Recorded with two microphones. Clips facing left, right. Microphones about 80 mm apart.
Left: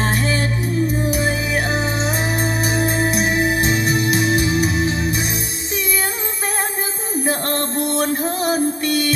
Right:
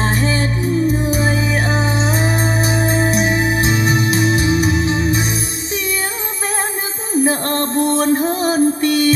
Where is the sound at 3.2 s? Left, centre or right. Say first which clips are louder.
Right 2 dB; left.